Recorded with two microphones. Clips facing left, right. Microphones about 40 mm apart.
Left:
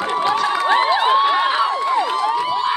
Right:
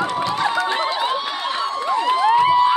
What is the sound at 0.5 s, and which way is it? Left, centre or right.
Crowd, left.